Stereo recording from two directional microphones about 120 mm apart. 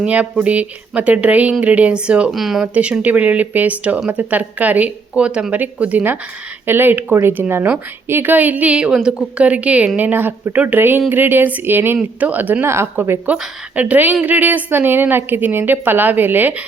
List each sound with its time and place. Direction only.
0.0 s speech: 10° right (ahead or behind)